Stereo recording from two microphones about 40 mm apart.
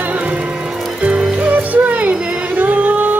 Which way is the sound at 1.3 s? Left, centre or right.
Right.